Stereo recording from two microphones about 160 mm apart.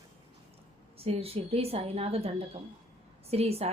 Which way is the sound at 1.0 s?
40° right (ahead or behind).